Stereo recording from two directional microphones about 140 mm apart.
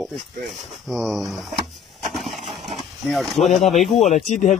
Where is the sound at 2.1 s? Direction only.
Centre (ahead or behind).